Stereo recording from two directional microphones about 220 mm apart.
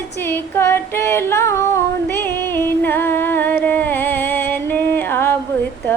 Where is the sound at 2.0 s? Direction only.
10° left (ahead or behind).